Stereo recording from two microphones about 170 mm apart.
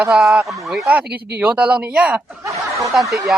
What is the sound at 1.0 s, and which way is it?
Speech, 70° right (ahead or behind).